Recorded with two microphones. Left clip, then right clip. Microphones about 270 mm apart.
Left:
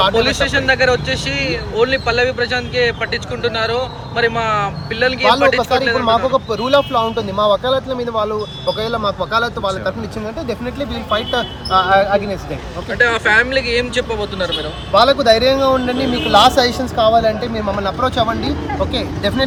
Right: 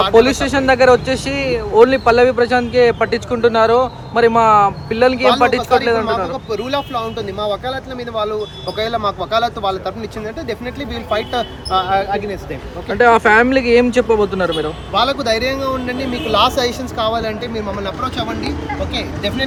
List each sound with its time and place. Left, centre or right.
0.2 s speech: centre
6.3 s speech: centre
9.0 s speech: centre
11.7 s speech: centre
13.0 s speech: centre
14.9 s speech: centre